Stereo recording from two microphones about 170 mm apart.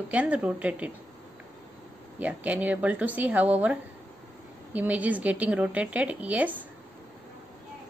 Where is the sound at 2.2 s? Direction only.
10° right (ahead or behind).